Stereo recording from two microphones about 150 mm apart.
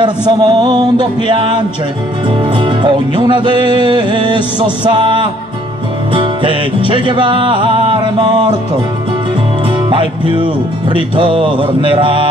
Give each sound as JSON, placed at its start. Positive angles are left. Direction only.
{"t": 0.0, "sound": "music", "side_deg": -30}
{"t": 9.8, "sound": "music", "side_deg": -35}